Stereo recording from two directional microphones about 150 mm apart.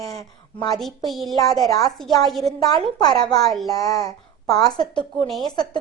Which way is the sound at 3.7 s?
25° left (ahead or behind).